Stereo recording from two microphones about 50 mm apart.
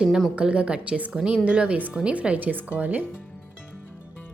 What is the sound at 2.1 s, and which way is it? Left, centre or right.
Speech, right.